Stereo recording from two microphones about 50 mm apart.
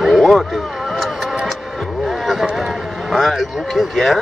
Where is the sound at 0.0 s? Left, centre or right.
Centre.